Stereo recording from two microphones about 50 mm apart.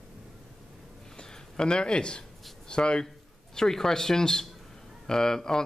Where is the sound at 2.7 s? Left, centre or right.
Centre.